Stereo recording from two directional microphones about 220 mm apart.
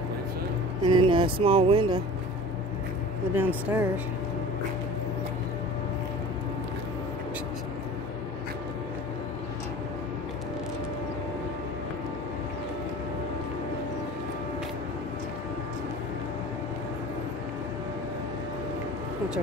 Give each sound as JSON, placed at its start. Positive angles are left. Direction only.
{"t": 0.8, "sound": "speech", "side_deg": -20}
{"t": 3.3, "sound": "speech", "side_deg": -10}